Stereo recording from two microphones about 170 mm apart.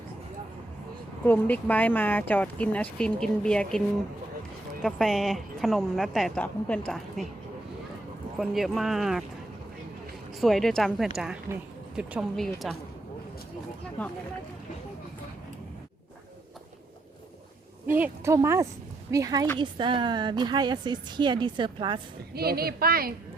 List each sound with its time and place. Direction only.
1.2 s speech: 10° left (ahead or behind)
8.4 s speech: centre (ahead or behind)
10.4 s speech: centre (ahead or behind)
11.5 s speech: 15° right (ahead or behind)
11.9 s speech: 5° right (ahead or behind)
14.0 s speech: 10° left (ahead or behind)
17.9 s a woman's voice: 15° right (ahead or behind); by 22.0 s 30° right (ahead or behind)
22.4 s a woman's voice: 65° right (ahead or behind)